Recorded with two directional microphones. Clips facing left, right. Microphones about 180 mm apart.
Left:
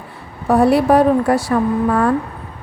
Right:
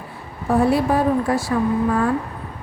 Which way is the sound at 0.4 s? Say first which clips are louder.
Left 5 dB; 70° left (ahead or behind).